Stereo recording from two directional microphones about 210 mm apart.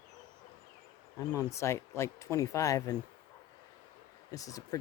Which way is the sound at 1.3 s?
15° left (ahead or behind).